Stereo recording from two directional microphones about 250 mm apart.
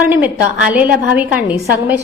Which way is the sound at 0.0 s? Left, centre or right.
Centre.